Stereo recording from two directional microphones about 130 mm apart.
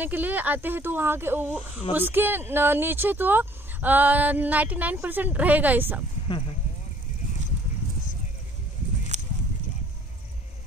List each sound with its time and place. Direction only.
0.0 s speech: 15° right (ahead or behind)
6.2 s speech: 40° left (ahead or behind)
9.1 s clip-clop: 65° right (ahead or behind)